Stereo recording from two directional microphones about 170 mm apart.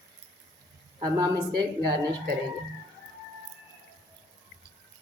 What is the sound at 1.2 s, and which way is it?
Speech, 25° right (ahead or behind).